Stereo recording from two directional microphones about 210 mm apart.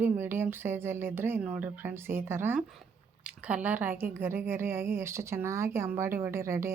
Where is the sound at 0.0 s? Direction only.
10° right (ahead or behind).